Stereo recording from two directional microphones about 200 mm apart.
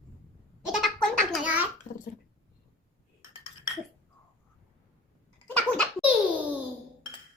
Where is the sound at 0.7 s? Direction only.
Centre (ahead or behind).